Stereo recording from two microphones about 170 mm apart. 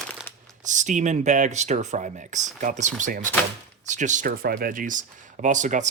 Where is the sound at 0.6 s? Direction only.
45° right (ahead or behind).